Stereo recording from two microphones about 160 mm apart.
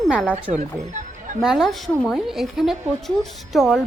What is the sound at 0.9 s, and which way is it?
Music, 50° right (ahead or behind).